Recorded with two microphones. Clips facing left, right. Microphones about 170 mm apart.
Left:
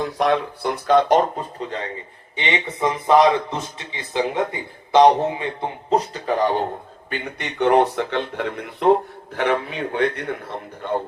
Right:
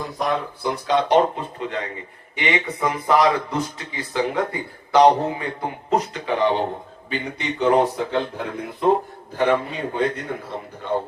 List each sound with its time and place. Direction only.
0.2 s speech: 75° left (ahead or behind)
0.9 s a man's voice: 45° left (ahead or behind)
7.1 s speech: 60° left (ahead or behind)